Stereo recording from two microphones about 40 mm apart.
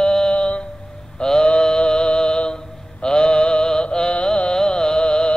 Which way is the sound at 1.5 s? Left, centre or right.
Left.